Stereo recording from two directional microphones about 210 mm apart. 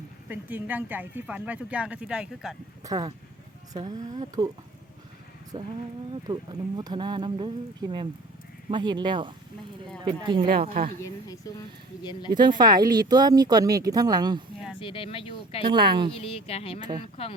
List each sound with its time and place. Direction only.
0.3 s speech: 10° right (ahead or behind)
2.8 s speech: 20° right (ahead or behind)
5.5 s speech: 25° right (ahead or behind)
10.5 s speech: 45° right (ahead or behind)
11.0 s speech: 15° left (ahead or behind)
12.3 s speech: 20° right (ahead or behind)
14.8 s speech: 25° left (ahead or behind)
15.6 s speech: 20° right (ahead or behind)
16.1 s speech: 25° left (ahead or behind)